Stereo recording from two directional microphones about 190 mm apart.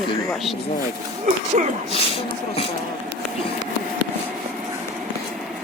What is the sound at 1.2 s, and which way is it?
Speech, 40° right (ahead or behind).